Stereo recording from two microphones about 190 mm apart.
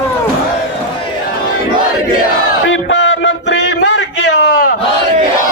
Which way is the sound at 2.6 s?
85° left.